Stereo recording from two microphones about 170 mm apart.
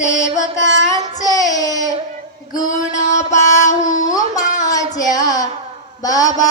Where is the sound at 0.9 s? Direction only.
20° left (ahead or behind).